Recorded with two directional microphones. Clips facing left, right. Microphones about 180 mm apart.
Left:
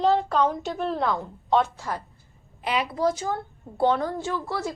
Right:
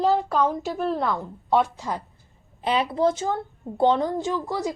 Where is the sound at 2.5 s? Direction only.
30° right (ahead or behind).